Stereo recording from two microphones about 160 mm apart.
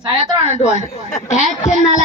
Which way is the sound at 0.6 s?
45° left (ahead or behind).